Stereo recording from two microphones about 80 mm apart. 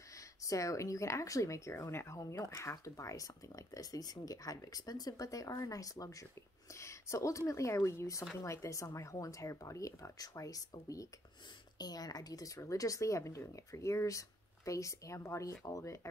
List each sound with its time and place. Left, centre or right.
0.4 s speech: left
11.8 s speech: left